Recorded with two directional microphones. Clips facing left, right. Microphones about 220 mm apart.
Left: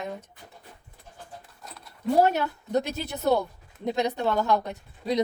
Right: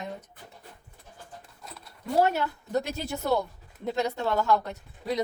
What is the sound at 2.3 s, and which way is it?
A woman's voice, 20° left (ahead or behind).